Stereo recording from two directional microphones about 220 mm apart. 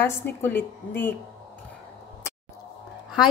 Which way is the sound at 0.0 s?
10° left (ahead or behind).